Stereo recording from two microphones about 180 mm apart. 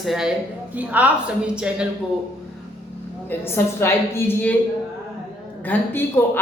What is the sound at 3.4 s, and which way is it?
A woman's voice, 10° left (ahead or behind).